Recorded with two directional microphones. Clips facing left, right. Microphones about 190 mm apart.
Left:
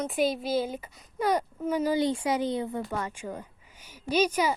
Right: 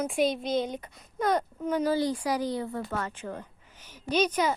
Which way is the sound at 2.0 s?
25° left (ahead or behind).